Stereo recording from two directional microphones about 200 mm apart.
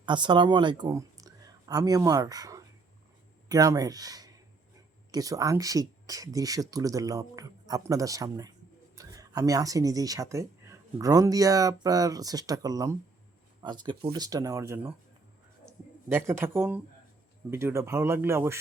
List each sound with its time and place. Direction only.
0.0 s speech: 25° right (ahead or behind)
16.1 s speech: 10° right (ahead or behind)